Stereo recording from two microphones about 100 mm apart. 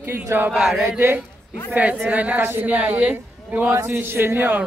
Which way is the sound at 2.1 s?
15° right (ahead or behind).